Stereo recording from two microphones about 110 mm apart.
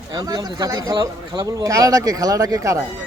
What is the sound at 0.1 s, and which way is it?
Speech, 40° right (ahead or behind).